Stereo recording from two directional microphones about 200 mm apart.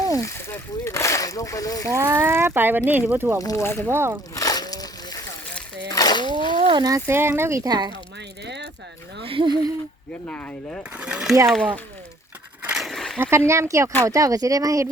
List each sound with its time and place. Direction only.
0.3 s speech: 10° left (ahead or behind)
1.9 s speech: 15° right (ahead or behind)
3.4 s speech: 15° left (ahead or behind)
3.8 s speech: 10° right (ahead or behind)
4.4 s a sound: 20° left (ahead or behind)
5.9 s splash: 20° left (ahead or behind)
6.6 s a sound: 20° right (ahead or behind)
7.1 s speech: 10° right (ahead or behind)
8.4 s a sound: 60° right (ahead or behind)
9.2 s speech: 25° right (ahead or behind)
10.2 s speech: 5° left (ahead or behind)
10.9 s speech: 5° right (ahead or behind)
12.6 s a sound: centre (ahead or behind)
13.5 s speech: 15° right (ahead or behind)